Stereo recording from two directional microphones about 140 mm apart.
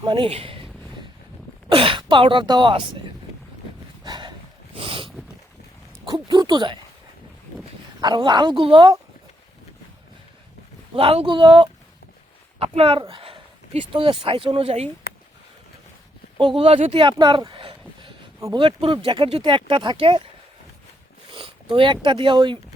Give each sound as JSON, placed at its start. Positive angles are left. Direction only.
{"t": 0.0, "sound": "speech", "side_deg": -35}
{"t": 0.3, "sound": "a sound", "side_deg": -45}
{"t": 1.7, "sound": "speech", "side_deg": -40}
{"t": 4.0, "sound": "a sound", "side_deg": -35}
{"t": 6.1, "sound": "speech", "side_deg": -30}
{"t": 8.0, "sound": "speech", "side_deg": -30}
{"t": 10.9, "sound": "speech", "side_deg": -40}
{"t": 16.4, "sound": "speech", "side_deg": -40}
{"t": 21.2, "sound": "speech", "side_deg": -40}